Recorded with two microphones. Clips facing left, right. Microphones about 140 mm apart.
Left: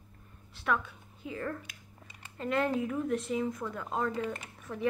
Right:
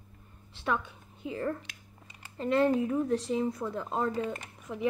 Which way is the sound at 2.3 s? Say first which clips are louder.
Right 4 dB; 30° right (ahead or behind).